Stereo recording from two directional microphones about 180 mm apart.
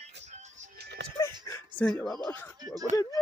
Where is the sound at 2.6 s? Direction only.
20° right (ahead or behind).